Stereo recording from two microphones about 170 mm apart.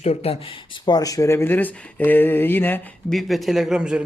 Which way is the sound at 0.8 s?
20° left (ahead or behind).